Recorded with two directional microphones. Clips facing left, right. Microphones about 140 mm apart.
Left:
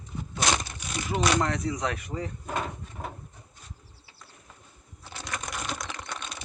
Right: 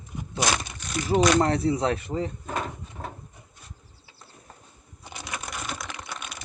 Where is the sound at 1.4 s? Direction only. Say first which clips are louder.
Right 5 dB; 30° right (ahead or behind).